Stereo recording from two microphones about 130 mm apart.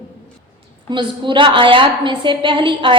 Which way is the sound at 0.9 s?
40° right (ahead or behind).